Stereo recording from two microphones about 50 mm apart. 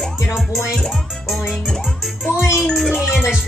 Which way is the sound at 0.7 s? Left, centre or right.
Centre.